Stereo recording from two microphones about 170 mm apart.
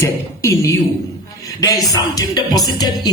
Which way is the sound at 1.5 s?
20° left (ahead or behind).